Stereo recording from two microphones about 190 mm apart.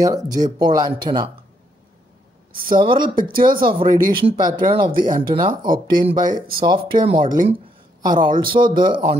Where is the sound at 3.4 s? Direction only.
50° right (ahead or behind).